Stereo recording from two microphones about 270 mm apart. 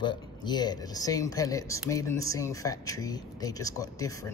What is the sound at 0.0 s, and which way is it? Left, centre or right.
Speech, centre.